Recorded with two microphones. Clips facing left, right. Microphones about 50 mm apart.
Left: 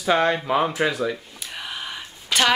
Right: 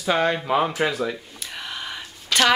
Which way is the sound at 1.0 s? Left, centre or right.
Centre.